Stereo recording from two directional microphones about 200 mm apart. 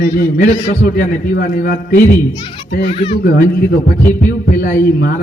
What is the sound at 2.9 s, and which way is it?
Speech, 25° left (ahead or behind).